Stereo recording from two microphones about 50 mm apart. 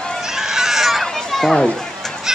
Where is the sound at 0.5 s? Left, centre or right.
Centre.